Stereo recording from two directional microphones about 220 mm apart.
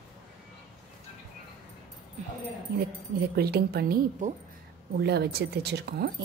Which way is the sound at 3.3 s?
45° right (ahead or behind).